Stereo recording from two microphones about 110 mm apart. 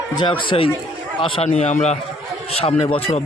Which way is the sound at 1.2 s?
80° left.